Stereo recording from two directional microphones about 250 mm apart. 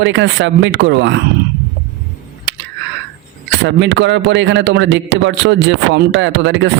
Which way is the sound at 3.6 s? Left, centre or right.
Right.